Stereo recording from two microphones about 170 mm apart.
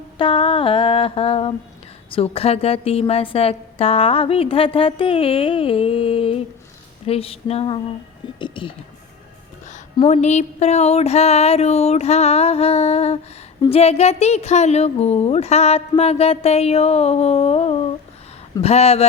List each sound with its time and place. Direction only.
0.2 s a woman's voice: 30° left (ahead or behind)
10.1 s a woman's voice: 40° left (ahead or behind)